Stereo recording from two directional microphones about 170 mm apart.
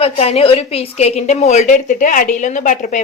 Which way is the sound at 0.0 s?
35° left (ahead or behind).